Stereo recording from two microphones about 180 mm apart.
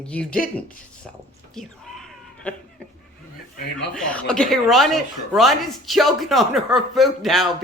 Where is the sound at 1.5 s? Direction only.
Centre (ahead or behind).